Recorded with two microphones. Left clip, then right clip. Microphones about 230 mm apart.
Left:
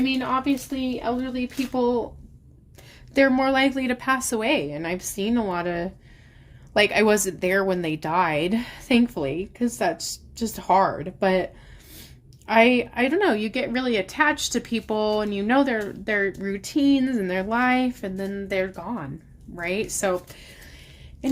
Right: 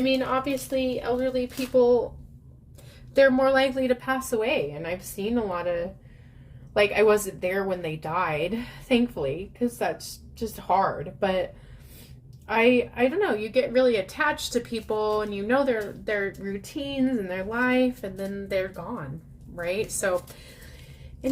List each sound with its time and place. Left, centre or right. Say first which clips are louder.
0.0 s speech: even; left
3.2 s a woman's voice: even; left
12.5 s a woman's voice: left 3 dB; left